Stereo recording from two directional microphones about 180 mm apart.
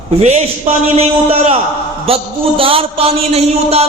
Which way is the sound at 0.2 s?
35° right (ahead or behind).